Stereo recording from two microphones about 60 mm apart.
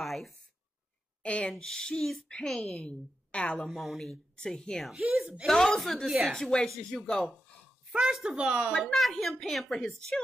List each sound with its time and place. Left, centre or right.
0.0 s a sound: centre
1.2 s speech: left
1.5 s speech: centre
2.9 s a woman's voice: left
3.6 s speech: centre
8.0 s speech: centre
8.8 s speech: centre